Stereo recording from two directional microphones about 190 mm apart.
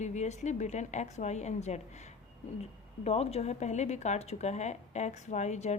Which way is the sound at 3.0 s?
35° left (ahead or behind).